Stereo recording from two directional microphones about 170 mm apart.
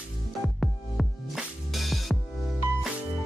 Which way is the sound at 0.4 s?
Centre (ahead or behind).